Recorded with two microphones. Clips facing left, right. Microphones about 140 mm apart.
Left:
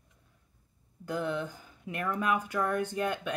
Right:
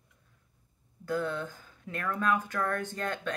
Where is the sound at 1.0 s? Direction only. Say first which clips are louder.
Even; 15° left (ahead or behind).